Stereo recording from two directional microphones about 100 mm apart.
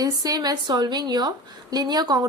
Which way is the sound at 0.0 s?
40° right (ahead or behind).